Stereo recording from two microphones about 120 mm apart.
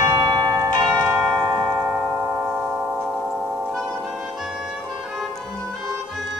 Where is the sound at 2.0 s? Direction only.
25° right (ahead or behind); by 3.4 s 10° right (ahead or behind).